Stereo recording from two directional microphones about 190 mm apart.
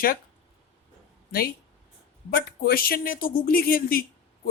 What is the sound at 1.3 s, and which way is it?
Speech, 50° left (ahead or behind).